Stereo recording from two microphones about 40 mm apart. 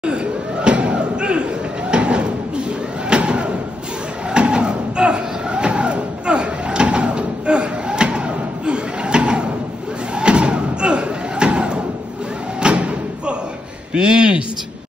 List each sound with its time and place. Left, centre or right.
0.0 s slam: right
3.1 s a sound: right
10.1 s slam: right
13.9 s a man's voice: right